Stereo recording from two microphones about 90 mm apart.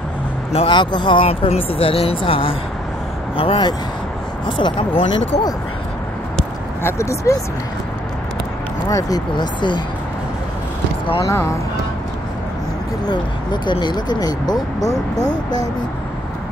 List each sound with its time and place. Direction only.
0.5 s speech: 75° left (ahead or behind)
4.5 s speech: 65° left (ahead or behind); by 5.2 s 85° left
6.8 s speech: 30° left (ahead or behind)
8.8 s speech: 45° left (ahead or behind)
11.2 s speech: 30° left (ahead or behind)
13.0 s speech: 55° left (ahead or behind)